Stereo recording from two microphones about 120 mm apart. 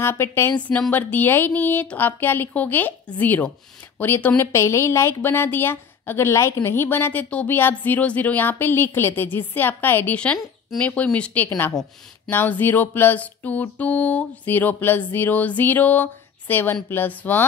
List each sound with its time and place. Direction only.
0.0 s a woman's voice: 20° left (ahead or behind)